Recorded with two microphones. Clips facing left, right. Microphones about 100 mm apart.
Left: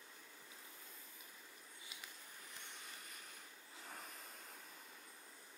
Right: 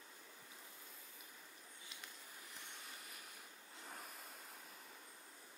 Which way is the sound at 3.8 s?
Centre (ahead or behind).